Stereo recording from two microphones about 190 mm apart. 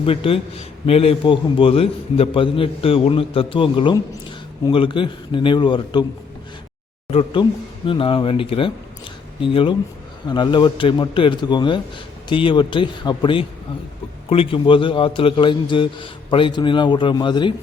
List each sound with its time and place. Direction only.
0.0 s a man's voice: 30° left (ahead or behind)
7.1 s a man's voice: 30° left (ahead or behind)